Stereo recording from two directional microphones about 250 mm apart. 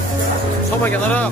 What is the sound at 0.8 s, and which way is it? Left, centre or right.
Speech, centre.